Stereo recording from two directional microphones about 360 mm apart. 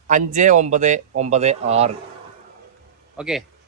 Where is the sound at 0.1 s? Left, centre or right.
Right.